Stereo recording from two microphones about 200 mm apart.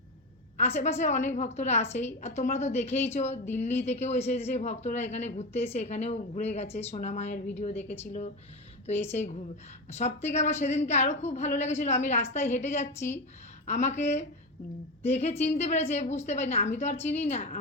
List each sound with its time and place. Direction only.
0.5 s a woman's voice: 35° left (ahead or behind)
7.8 s speech: 10° left (ahead or behind)
8.0 s a woman's voice: 35° left (ahead or behind)
10.0 s a woman's voice: 35° left (ahead or behind)